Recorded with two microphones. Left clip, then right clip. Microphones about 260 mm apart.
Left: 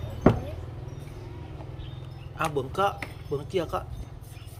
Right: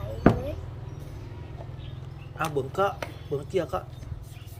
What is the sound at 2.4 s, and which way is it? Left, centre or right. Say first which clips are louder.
Speech: even; centre.